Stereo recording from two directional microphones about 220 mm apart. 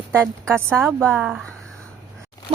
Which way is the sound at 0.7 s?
5° left (ahead or behind).